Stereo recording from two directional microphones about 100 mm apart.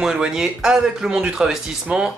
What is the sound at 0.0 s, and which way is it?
Speech, 5° right (ahead or behind).